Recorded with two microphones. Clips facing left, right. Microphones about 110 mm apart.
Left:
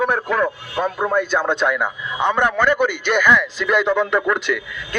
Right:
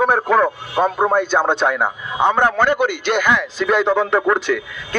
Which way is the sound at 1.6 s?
40° right (ahead or behind).